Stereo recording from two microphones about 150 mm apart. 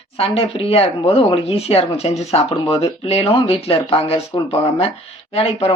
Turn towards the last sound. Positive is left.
turn(degrees=40)  # may be behind; listen again after turning